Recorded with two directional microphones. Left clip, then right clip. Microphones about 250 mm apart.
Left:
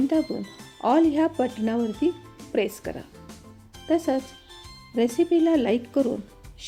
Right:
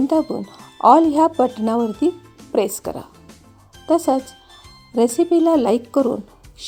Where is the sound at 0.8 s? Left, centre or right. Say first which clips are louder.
Right 9 dB; centre.